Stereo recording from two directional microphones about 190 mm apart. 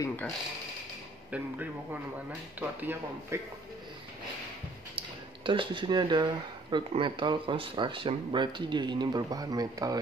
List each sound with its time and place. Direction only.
0.0 s speech: 10° left (ahead or behind)
1.3 s speech: 10° right (ahead or behind)
4.9 s speech: 25° right (ahead or behind)